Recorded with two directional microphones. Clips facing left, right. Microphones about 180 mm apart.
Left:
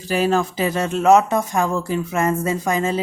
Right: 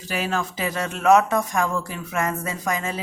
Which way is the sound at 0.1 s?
35° left (ahead or behind).